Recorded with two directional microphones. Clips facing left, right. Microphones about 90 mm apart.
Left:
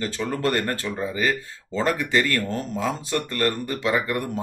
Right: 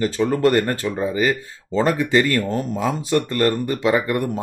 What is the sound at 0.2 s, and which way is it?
Speech, 25° right (ahead or behind).